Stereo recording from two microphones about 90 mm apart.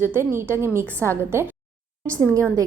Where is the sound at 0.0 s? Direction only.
25° right (ahead or behind).